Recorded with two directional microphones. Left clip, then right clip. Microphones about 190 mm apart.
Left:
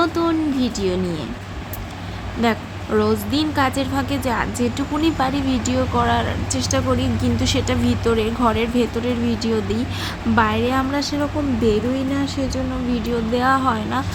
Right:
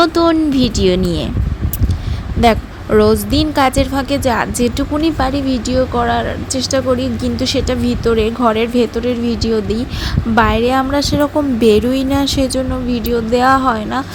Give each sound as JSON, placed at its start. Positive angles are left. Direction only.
{"t": 0.0, "sound": "a woman's voice", "side_deg": -35}
{"t": 2.4, "sound": "a woman's voice", "side_deg": -30}
{"t": 12.9, "sound": "a woman's voice", "side_deg": -25}